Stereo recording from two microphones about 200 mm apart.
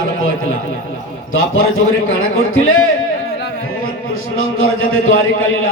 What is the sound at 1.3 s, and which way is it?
A man's voice, 90° left.